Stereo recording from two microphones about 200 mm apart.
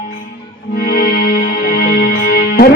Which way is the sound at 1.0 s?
45° left (ahead or behind).